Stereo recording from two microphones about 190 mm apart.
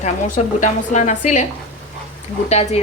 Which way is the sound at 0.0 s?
40° left (ahead or behind).